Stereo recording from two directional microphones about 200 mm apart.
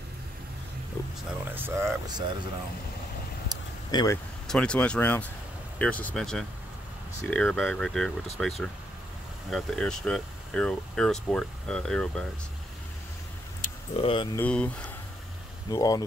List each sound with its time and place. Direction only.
1.0 s speech: 15° left (ahead or behind)
1.5 s speech: 10° right (ahead or behind)
3.5 s a sound: 20° right (ahead or behind)
3.9 s speech: 15° left (ahead or behind)
4.5 s speech: 5° left (ahead or behind)
13.6 s keys jangling: 45° left (ahead or behind)
13.9 s speech: 25° left (ahead or behind)
14.4 s speech: 5° left (ahead or behind)
15.7 s speech: 20° left (ahead or behind)